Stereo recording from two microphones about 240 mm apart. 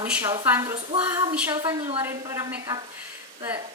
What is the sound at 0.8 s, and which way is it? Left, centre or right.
Speech, right.